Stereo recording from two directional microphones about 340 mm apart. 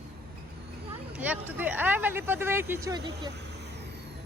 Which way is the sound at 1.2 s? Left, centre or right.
Centre.